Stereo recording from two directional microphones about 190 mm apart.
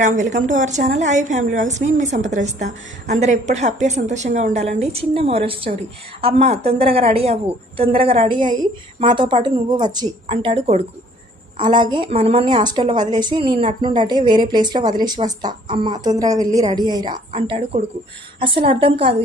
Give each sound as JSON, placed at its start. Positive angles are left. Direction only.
{"t": 0.0, "sound": "a woman's voice", "side_deg": -40}